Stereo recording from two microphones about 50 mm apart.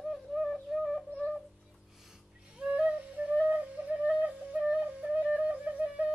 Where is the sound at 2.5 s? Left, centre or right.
Right.